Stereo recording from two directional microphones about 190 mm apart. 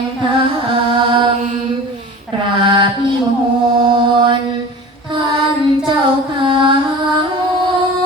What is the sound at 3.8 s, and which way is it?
Mantra, 30° right (ahead or behind).